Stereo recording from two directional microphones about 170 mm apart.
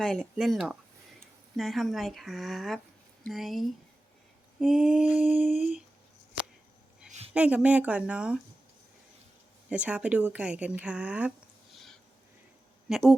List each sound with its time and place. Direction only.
0.0 s speech: centre (ahead or behind)
5.5 s speech: 45° left (ahead or behind)
7.3 s speech: 5° right (ahead or behind)
9.6 s speech: 5° right (ahead or behind)
12.9 s speech: 5° right (ahead or behind)